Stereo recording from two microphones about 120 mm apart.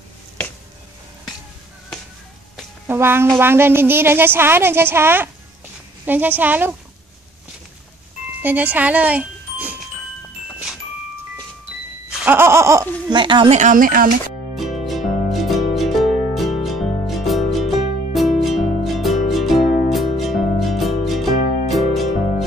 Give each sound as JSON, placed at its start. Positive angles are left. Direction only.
{"t": 2.9, "sound": "a woman's voice", "side_deg": -20}
{"t": 8.4, "sound": "speech", "side_deg": -15}
{"t": 12.3, "sound": "a woman's voice", "side_deg": -20}
{"t": 13.1, "sound": "speech", "side_deg": -40}
{"t": 13.5, "sound": "speech", "side_deg": -90}
{"t": 14.5, "sound": "music", "side_deg": 0}